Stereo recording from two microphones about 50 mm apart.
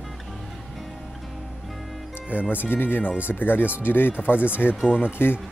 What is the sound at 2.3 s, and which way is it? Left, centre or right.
Speech, left.